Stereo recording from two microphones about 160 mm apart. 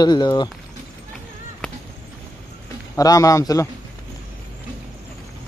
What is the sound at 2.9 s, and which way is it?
Speech, 20° left (ahead or behind).